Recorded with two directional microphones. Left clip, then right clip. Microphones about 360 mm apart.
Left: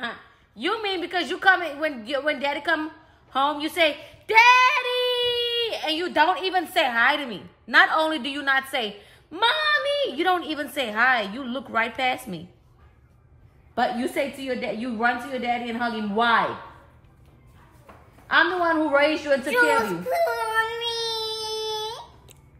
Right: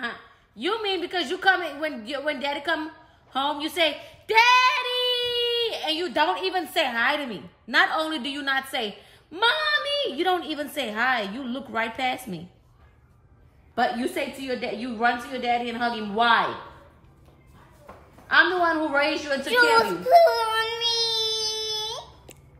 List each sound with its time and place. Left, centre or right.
0.6 s a woman's voice: centre
14.5 s a woman's voice: centre
18.2 s a woman's voice: left
19.5 s speech: centre
20.4 s child singing: centre